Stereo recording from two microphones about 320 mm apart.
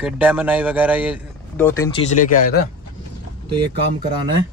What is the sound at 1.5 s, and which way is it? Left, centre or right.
Speech, centre.